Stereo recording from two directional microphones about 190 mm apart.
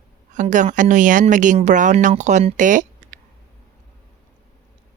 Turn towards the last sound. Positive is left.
turn(degrees=-45)  # may be behind; listen again after turning